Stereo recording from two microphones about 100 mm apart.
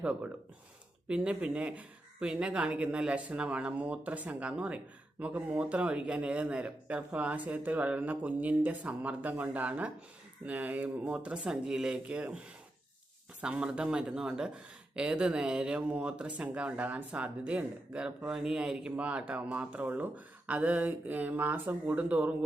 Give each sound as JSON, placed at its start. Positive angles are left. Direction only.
{"t": 0.0, "sound": "speech", "side_deg": -10}
{"t": 13.4, "sound": "speech", "side_deg": -10}